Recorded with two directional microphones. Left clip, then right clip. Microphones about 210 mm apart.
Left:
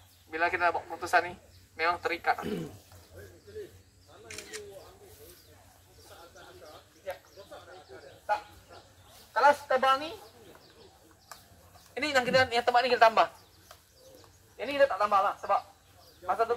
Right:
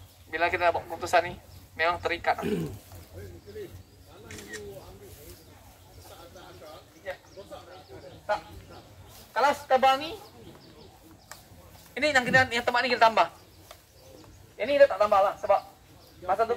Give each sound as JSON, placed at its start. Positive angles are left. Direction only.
{"t": 0.3, "sound": "a woman's voice", "side_deg": 0}
{"t": 4.3, "sound": "a sound", "side_deg": 35}
{"t": 9.3, "sound": "speech", "side_deg": -5}
{"t": 11.9, "sound": "a woman's voice", "side_deg": 0}
{"t": 14.6, "sound": "a woman's voice", "side_deg": 5}